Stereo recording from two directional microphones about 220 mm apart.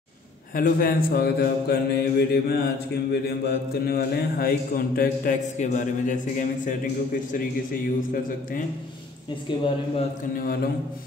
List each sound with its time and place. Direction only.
0.6 s mantra: 40° left (ahead or behind)
3.1 s speech: 45° left (ahead or behind)
9.5 s speech: 20° left (ahead or behind)
10.3 s speech: 40° left (ahead or behind)